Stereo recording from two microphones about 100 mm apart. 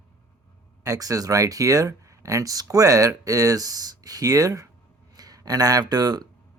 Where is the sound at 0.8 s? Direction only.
35° right (ahead or behind).